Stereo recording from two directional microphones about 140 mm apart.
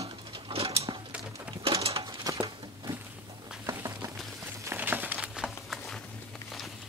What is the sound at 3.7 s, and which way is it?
Patter, 25° right (ahead or behind).